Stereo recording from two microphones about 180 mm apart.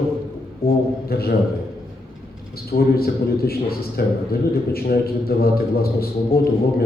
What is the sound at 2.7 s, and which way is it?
A man's voice, 60° left (ahead or behind).